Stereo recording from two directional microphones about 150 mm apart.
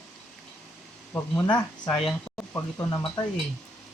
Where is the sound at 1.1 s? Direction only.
15° left (ahead or behind).